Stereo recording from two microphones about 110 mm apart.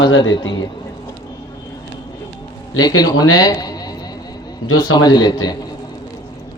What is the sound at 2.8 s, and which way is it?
A man's voice, 40° left (ahead or behind).